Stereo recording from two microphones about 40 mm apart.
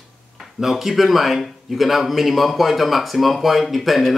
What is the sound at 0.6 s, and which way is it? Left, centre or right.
A man's voice, centre.